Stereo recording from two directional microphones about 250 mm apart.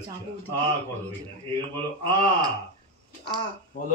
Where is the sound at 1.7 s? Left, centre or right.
Right.